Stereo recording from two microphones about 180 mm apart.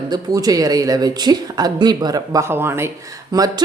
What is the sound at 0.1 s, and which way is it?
Speech, 20° right (ahead or behind).